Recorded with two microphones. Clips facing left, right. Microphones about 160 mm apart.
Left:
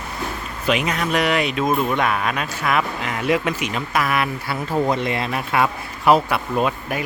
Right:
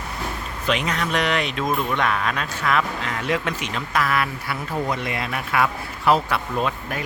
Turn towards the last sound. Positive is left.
turn(degrees=10)  # may be behind; listen again after turning